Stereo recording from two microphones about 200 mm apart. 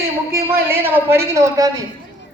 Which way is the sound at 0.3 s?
10° right (ahead or behind).